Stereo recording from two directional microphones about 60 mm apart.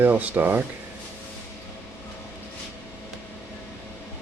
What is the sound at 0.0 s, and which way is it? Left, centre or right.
Speech, right.